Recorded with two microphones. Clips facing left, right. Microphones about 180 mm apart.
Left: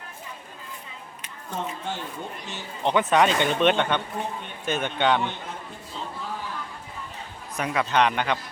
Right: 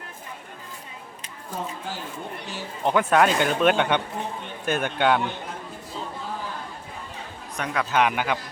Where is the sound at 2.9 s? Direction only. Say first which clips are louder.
Right 1 dB; 5° right (ahead or behind).